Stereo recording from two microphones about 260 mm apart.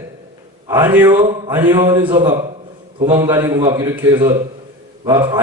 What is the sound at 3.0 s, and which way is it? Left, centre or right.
A man's voice, centre.